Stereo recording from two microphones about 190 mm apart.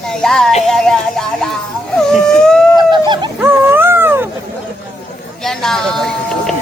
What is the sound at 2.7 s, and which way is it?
Chicken, 25° right (ahead or behind).